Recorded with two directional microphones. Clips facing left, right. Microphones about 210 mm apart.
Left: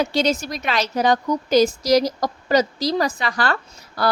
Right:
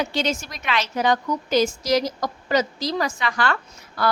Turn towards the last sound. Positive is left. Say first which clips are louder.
# left 2 dB
turn(degrees=35)  # may be behind; listen again after turning